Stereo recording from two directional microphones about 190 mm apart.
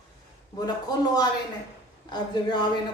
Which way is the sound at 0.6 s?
20° left (ahead or behind).